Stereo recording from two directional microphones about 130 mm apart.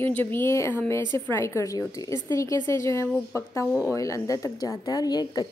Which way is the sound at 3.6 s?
10° right (ahead or behind).